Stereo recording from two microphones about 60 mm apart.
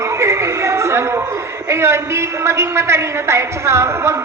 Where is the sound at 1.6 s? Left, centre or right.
Right.